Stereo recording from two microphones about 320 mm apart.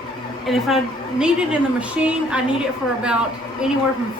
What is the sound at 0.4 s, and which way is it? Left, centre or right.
A woman's voice, centre.